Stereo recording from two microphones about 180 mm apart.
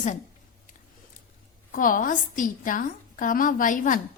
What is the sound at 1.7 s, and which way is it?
A woman's voice, 50° left (ahead or behind).